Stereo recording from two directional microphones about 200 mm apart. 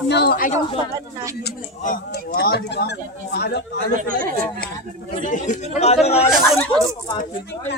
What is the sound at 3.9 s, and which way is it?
Speech, 45° right (ahead or behind).